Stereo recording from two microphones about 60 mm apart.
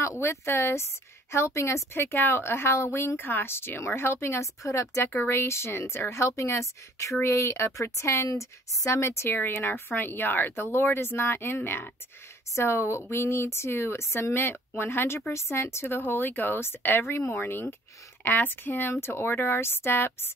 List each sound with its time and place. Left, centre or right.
0.0 s a woman's voice: left
12.5 s a woman's voice: left
14.3 s a woman's voice: left